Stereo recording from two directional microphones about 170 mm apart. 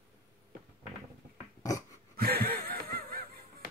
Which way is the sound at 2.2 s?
65° right (ahead or behind).